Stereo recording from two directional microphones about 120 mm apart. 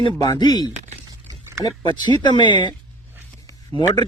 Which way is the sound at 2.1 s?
40° left (ahead or behind).